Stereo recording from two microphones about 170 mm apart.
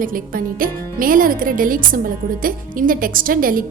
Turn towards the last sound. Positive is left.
turn(degrees=-55)  # may be behind; listen again after turning